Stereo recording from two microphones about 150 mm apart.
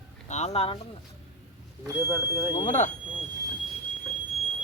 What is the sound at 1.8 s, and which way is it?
Speech, 15° right (ahead or behind).